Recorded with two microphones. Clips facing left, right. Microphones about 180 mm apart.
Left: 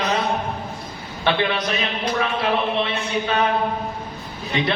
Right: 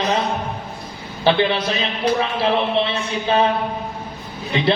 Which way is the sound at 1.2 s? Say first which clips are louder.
Right 4 dB; 30° right (ahead or behind).